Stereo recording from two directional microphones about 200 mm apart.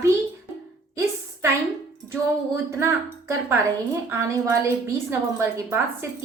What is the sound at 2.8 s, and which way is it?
A woman's voice, 15° right (ahead or behind).